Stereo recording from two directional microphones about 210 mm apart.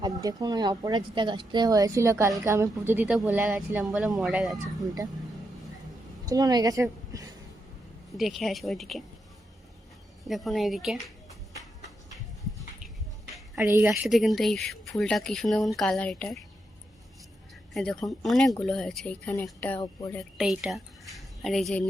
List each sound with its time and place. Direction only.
0.0 s speech: 20° right (ahead or behind)
6.2 s a woman's voice: 15° right (ahead or behind)
8.2 s speech: centre (ahead or behind)
10.2 s speech: centre (ahead or behind)
13.8 s speech: centre (ahead or behind)
17.7 s speech: centre (ahead or behind)
20.1 s speech: 5° right (ahead or behind)